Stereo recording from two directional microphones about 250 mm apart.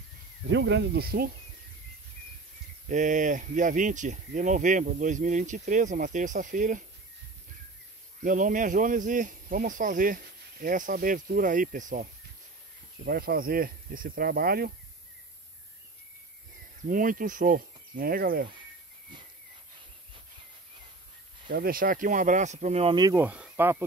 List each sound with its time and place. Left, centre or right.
0.5 s speech: right
2.9 s speech: right
8.2 s speech: right
16.8 s speech: right
21.5 s speech: right; by 23.8 s centre